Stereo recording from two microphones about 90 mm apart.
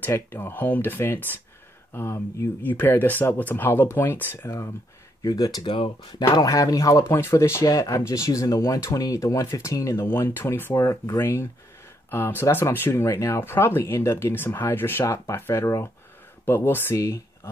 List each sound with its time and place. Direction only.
0.0 s speech: 25° left (ahead or behind)
5.2 s speech: 45° left (ahead or behind)
5.7 s speech: 60° left (ahead or behind); by 7.0 s 40° left (ahead or behind)
7.0 s speech: 30° left (ahead or behind)
10.0 s speech: 25° left (ahead or behind)
16.9 s speech: 35° left (ahead or behind)